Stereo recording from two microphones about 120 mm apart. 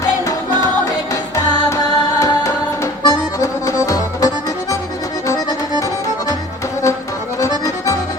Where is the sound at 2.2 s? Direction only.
25° left (ahead or behind).